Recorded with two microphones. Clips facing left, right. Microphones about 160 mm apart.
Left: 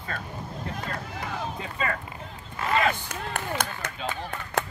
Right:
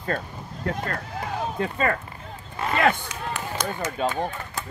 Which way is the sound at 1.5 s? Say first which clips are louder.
Right 7 dB; 50° right (ahead or behind).